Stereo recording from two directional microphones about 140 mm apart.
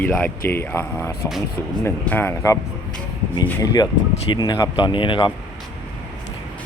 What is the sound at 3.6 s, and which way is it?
Speech, 25° left (ahead or behind).